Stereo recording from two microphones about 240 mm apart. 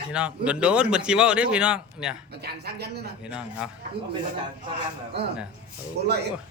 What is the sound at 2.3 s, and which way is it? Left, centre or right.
Speech, right.